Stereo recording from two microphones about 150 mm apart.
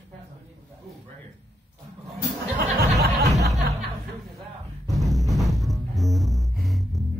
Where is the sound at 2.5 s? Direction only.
90° right.